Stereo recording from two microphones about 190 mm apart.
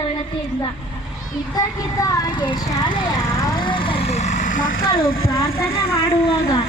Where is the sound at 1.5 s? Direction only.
15° left (ahead or behind).